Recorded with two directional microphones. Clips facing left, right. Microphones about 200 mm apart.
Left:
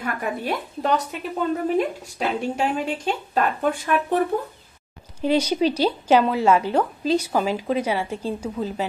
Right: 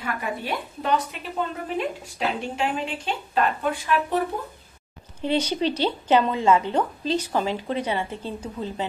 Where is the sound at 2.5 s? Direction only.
40° left (ahead or behind).